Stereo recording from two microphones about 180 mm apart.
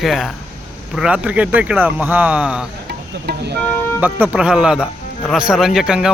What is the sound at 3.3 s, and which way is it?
Speech, 65° right (ahead or behind).